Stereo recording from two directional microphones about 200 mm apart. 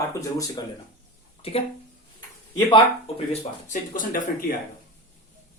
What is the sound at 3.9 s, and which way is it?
Speech, 40° left (ahead or behind).